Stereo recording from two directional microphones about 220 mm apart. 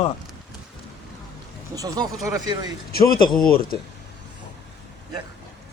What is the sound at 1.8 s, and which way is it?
Speech, 15° right (ahead or behind).